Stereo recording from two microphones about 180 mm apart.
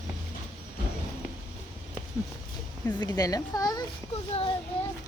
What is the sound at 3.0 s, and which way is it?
Speech, 20° left (ahead or behind).